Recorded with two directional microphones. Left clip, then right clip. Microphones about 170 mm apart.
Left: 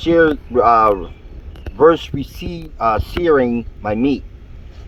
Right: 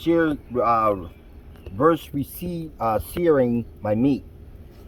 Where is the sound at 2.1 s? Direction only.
20° left (ahead or behind).